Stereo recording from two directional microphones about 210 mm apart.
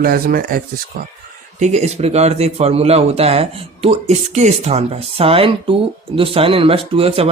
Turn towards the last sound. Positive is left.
turn(degrees=-25)  # may be behind; listen again after turning